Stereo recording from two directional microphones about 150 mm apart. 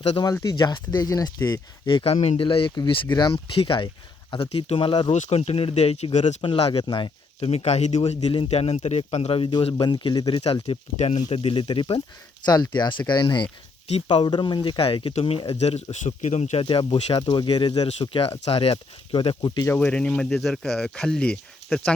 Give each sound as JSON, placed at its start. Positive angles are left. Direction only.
{"t": 0.4, "sound": "speech", "side_deg": 30}
{"t": 2.1, "sound": "speech", "side_deg": 55}
{"t": 2.4, "sound": "speech", "side_deg": 35}
{"t": 5.1, "sound": "speech", "side_deg": 50}
{"t": 6.4, "sound": "speech", "side_deg": 35}
{"t": 15.5, "sound": "speech", "side_deg": 45}
{"t": 16.6, "sound": "speech", "side_deg": 35}
{"t": 19.6, "sound": "speech", "side_deg": 10}